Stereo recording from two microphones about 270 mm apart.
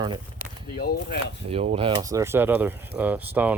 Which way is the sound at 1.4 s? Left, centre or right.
Right.